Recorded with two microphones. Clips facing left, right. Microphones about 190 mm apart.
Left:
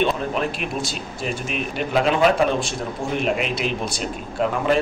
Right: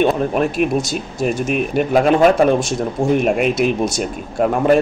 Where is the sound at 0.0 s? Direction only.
50° right (ahead or behind).